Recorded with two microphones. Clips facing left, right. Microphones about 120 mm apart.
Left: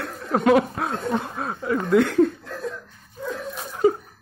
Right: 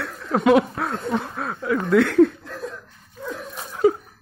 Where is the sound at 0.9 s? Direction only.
5° left (ahead or behind).